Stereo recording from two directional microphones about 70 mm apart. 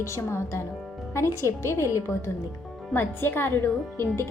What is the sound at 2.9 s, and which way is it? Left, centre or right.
A woman's voice, left.